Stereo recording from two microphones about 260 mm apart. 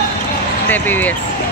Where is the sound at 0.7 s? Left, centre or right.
Centre.